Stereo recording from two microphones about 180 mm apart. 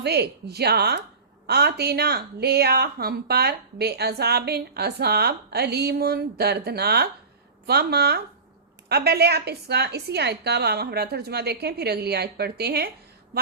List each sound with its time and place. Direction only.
0.0 s a woman's voice: 65° right (ahead or behind)